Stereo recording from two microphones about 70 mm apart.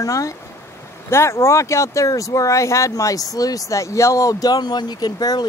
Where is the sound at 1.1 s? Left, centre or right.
Left.